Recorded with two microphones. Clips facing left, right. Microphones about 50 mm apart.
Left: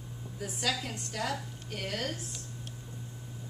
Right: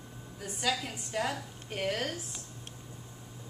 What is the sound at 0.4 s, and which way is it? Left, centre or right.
Speech, centre.